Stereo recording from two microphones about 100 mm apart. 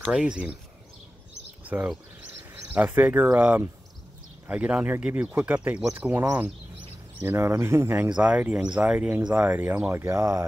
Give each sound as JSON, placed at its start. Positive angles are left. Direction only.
{"t": 0.1, "sound": "speech", "side_deg": -10}
{"t": 1.6, "sound": "bird", "side_deg": -15}
{"t": 2.7, "sound": "speech", "side_deg": -15}